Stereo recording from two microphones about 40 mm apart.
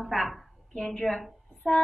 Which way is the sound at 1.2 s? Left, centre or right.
Centre.